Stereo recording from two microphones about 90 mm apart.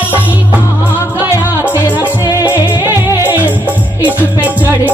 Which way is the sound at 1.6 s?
20° right (ahead or behind).